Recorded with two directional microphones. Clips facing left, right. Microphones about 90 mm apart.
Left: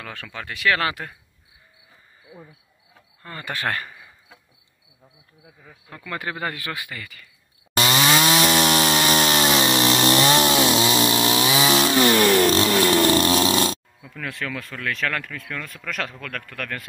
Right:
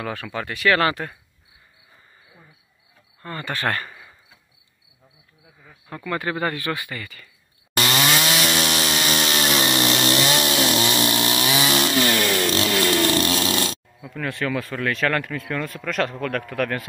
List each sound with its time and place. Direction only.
0.0 s speech: 5° right (ahead or behind)
3.2 s speech: 5° left (ahead or behind)
5.9 s speech: 5° right (ahead or behind)
6.1 s speech: 10° left (ahead or behind)
7.7 s chainsaw: 20° left (ahead or behind)
8.2 s chainsaw: 35° left (ahead or behind)
10.5 s chainsaw: 20° left (ahead or behind)
11.9 s a sound: 30° left (ahead or behind)
14.0 s speech: 5° right (ahead or behind)